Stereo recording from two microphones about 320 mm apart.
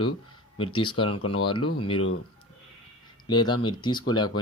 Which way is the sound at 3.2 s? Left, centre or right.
Centre.